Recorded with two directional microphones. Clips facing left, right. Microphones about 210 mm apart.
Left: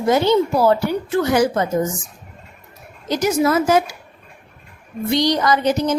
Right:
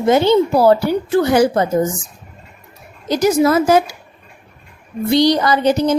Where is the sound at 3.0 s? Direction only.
35° right (ahead or behind).